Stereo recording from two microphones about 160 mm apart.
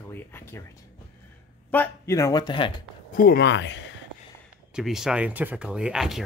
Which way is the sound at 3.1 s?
65° left (ahead or behind).